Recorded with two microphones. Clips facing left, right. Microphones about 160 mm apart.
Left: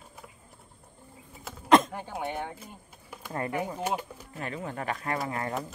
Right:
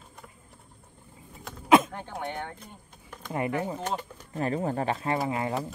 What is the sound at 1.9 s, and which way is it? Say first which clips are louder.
Speech: left 1 dB; 10° left (ahead or behind).